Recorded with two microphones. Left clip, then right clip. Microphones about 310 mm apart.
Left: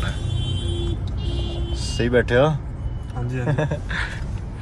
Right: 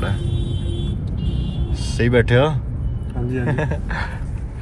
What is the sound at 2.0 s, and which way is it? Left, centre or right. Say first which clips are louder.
A man's voice: right 1 dB; right.